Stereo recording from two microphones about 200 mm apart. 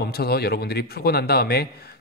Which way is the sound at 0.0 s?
50° left (ahead or behind).